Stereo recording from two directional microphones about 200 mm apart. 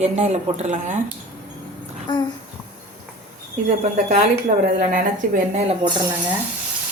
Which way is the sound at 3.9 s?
35° right (ahead or behind).